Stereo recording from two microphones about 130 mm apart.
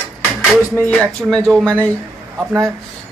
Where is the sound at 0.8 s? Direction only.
10° left (ahead or behind).